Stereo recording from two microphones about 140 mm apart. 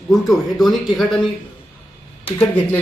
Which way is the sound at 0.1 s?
Centre (ahead or behind).